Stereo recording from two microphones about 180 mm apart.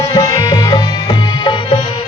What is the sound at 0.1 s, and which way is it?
Music, 20° left (ahead or behind).